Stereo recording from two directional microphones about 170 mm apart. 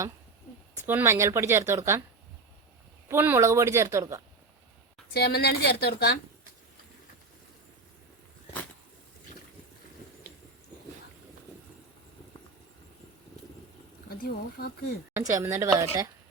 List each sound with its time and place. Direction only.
0.9 s speech: 15° right (ahead or behind)
3.1 s speech: 15° right (ahead or behind)
5.1 s a woman's voice: 70° left (ahead or behind)
14.1 s speech: 65° left (ahead or behind)
15.1 s speech: 20° right (ahead or behind)